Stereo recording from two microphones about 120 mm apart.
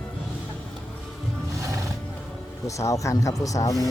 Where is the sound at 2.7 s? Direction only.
25° left (ahead or behind).